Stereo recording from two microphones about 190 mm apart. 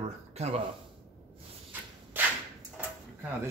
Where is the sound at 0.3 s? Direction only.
35° right (ahead or behind).